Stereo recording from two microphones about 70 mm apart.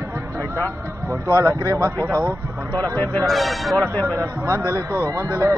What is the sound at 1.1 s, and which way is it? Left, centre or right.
A man's voice, right.